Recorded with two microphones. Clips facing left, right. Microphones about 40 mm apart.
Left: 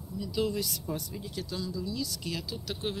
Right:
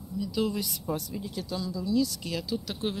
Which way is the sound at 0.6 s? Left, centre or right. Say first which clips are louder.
Even; right.